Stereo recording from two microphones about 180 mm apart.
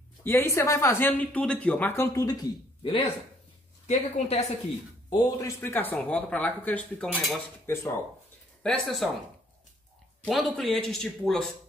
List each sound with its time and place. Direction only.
0.2 s speech: 10° left (ahead or behind); by 3.1 s 30° left (ahead or behind)
3.8 s a woman's voice: 40° left (ahead or behind)
5.1 s a man's voice: 25° left (ahead or behind)
5.6 s speech: 10° left (ahead or behind)
8.6 s a man's voice: centre (ahead or behind)
10.2 s a man's voice: centre (ahead or behind)